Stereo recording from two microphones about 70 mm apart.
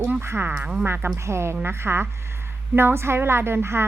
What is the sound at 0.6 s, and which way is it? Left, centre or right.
Speech, centre.